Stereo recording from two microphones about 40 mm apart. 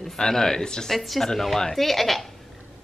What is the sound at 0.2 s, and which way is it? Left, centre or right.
Speech, centre.